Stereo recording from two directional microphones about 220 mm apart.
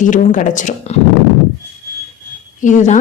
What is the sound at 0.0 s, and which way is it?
Speech, 35° left (ahead or behind).